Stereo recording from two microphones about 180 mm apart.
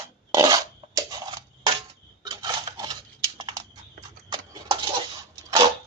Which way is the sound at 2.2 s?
25° right (ahead or behind).